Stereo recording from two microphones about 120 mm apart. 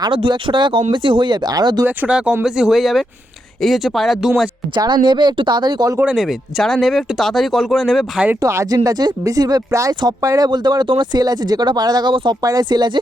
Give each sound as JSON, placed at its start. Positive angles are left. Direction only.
{"t": 0.0, "sound": "speech", "side_deg": -40}
{"t": 2.0, "sound": "speech", "side_deg": -10}
{"t": 4.7, "sound": "speech", "side_deg": -35}
{"t": 6.0, "sound": "speech", "side_deg": -5}
{"t": 8.4, "sound": "speech", "side_deg": -25}
{"t": 12.4, "sound": "speech", "side_deg": -30}